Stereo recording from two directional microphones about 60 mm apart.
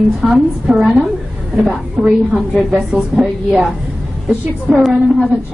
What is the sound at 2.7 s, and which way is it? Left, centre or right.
Speech, centre.